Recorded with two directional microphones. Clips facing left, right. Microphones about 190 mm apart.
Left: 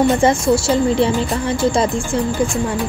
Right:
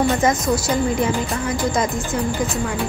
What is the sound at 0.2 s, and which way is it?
A woman's voice, 30° left (ahead or behind).